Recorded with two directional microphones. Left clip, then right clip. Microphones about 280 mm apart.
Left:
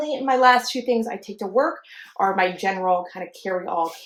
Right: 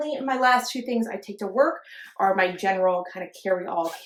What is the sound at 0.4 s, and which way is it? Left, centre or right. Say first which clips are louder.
Speech: left 4 dB; left.